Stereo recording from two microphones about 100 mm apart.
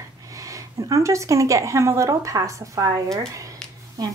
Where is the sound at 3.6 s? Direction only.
10° left (ahead or behind).